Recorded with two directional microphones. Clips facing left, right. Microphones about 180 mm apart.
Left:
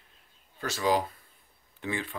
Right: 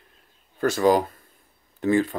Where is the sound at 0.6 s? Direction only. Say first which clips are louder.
Right 8 dB; 50° right (ahead or behind).